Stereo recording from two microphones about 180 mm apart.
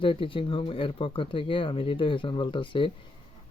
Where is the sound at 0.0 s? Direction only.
30° left (ahead or behind).